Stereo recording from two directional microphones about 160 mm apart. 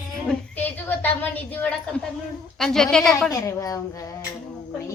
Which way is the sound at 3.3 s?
20° left (ahead or behind).